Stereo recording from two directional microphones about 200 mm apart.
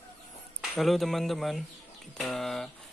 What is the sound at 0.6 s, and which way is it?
Speech, centre (ahead or behind).